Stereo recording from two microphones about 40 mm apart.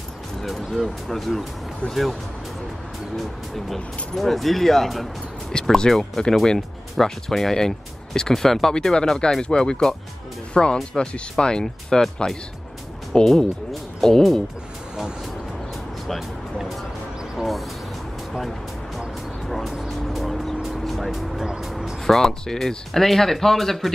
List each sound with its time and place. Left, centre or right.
0.4 s music: centre
0.8 s speech: centre
3.2 s speech: centre
13.1 s speech: centre
17.4 s a sound: centre
18.9 s vehicle: centre
20.8 s music: centre
22.0 s speech: centre